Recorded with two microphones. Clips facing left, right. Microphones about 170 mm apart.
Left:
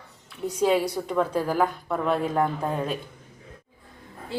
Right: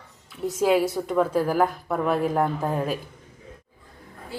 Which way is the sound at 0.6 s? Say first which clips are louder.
Right 2 dB; 5° right (ahead or behind).